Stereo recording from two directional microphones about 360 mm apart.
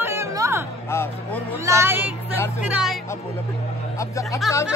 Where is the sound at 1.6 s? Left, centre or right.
Centre.